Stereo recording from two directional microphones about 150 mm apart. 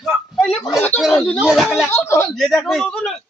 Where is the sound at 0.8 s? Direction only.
10° left (ahead or behind).